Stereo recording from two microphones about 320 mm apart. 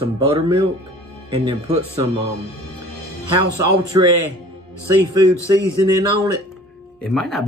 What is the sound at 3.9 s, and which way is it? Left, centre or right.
Speech, centre.